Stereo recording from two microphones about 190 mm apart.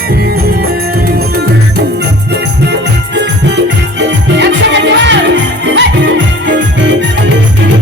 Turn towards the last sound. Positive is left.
turn(degrees=-75)  # may be behind; listen again after turning